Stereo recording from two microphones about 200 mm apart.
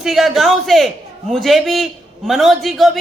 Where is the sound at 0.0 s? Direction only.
Centre (ahead or behind).